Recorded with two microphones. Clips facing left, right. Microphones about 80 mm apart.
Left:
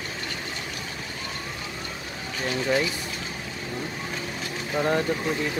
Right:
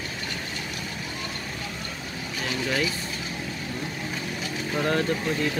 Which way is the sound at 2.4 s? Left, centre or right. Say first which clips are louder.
Left 3 dB; centre.